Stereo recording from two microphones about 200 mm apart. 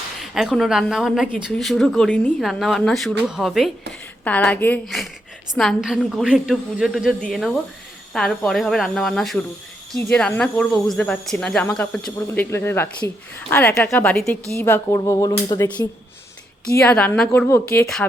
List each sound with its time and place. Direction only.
0.2 s a woman's voice: centre (ahead or behind); by 15.9 s 20° left (ahead or behind)
16.8 s speech: 5° left (ahead or behind)